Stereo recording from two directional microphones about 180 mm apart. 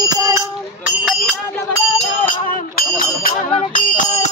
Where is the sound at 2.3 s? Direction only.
50° left (ahead or behind).